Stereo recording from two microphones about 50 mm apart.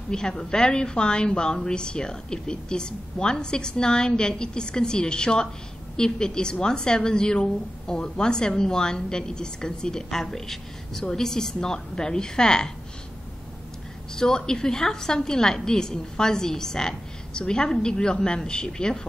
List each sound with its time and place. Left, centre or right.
0.1 s a woman's voice: centre
14.1 s a woman's voice: centre